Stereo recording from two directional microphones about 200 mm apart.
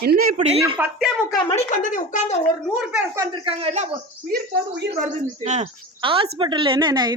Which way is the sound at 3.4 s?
30° right (ahead or behind).